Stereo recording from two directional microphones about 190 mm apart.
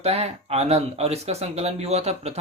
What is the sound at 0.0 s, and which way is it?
Speech, 30° right (ahead or behind).